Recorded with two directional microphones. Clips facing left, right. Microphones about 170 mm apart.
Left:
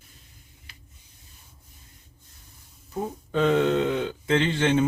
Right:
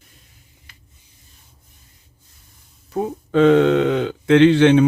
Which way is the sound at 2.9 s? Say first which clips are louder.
Right 8 dB; 85° right.